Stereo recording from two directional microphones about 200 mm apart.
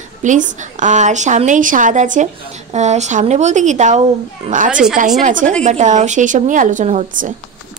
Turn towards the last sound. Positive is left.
turn(degrees=-40)  # may be behind; listen again after turning